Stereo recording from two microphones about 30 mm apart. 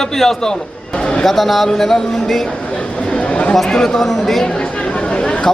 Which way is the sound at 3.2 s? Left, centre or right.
Left.